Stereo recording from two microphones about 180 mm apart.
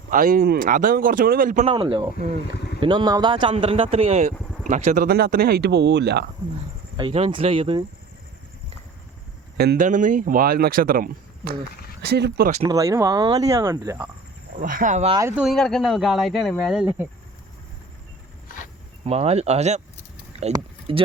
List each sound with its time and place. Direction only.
0.1 s speech: 50° right (ahead or behind)
1.6 s speech: 30° right (ahead or behind)
5.0 s speech: 55° right (ahead or behind)
6.9 s speech: 30° right (ahead or behind)
9.6 s speech: 60° right (ahead or behind)
9.8 s speech: 45° right (ahead or behind)
12.0 s speech: 65° right (ahead or behind)
12.6 s speech: 20° right (ahead or behind)
14.6 s speech: 50° right (ahead or behind)
15.1 s speech: 15° right (ahead or behind)
15.4 s speech: centre (ahead or behind)
19.0 s speech: 35° right (ahead or behind)